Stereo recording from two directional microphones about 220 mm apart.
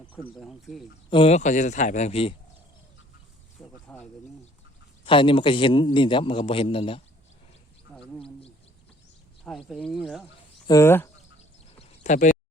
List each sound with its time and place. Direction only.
0.2 s speech: centre (ahead or behind)
1.1 s speech: 25° left (ahead or behind)
3.8 s speech: 5° left (ahead or behind)
5.0 s a man's voice: 25° left (ahead or behind)
9.4 s speech: centre (ahead or behind)
10.7 s speech: 10° left (ahead or behind)
11.8 s a sound: 35° left (ahead or behind)